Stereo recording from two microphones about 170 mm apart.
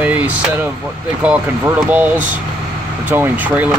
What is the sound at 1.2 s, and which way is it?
Speech, 10° right (ahead or behind).